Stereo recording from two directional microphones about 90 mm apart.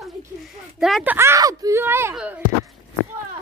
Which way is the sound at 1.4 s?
40° right (ahead or behind).